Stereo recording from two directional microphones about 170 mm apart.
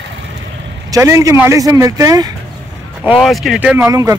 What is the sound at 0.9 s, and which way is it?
Speech, 20° right (ahead or behind).